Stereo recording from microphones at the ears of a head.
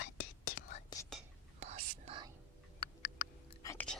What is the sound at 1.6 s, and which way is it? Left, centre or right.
Whispering, right.